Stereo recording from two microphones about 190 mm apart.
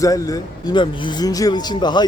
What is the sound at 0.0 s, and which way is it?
Speech, 20° left (ahead or behind).